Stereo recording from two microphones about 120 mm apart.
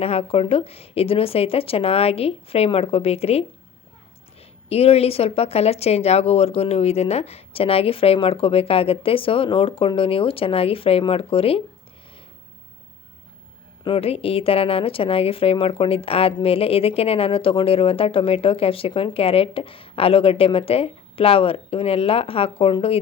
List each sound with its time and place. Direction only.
0.0 s a woman's voice: 55° left (ahead or behind)
13.8 s a woman's voice: 55° left (ahead or behind)